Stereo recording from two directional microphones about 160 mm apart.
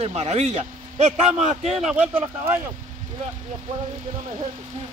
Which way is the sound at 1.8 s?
5° right (ahead or behind).